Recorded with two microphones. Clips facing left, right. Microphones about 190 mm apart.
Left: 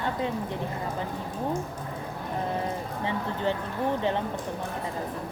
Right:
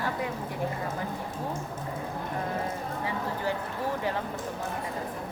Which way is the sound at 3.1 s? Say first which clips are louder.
Left 3 dB; 25° left (ahead or behind).